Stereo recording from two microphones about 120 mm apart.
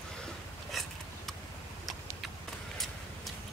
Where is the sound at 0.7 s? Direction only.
Centre (ahead or behind).